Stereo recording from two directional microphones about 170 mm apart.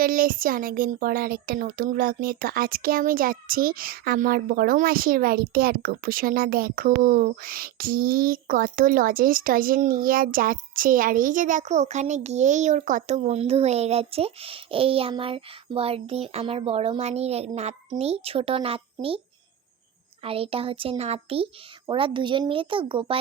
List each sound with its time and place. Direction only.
0.0 s speech: 55° right (ahead or behind); by 19.2 s 35° right (ahead or behind)
20.2 s speech: 35° right (ahead or behind)